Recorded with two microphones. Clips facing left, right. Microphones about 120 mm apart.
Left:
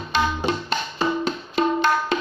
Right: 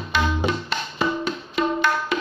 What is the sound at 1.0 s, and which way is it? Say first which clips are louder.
Music: even; 30° left (ahead or behind).